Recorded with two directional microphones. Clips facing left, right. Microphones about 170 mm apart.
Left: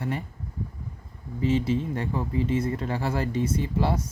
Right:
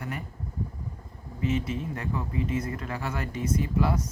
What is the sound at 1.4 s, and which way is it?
Speech, 30° left (ahead or behind).